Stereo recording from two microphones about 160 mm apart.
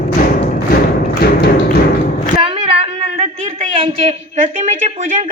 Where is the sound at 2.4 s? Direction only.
35° right (ahead or behind).